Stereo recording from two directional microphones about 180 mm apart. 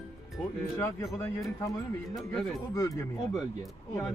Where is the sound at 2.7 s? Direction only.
20° left (ahead or behind).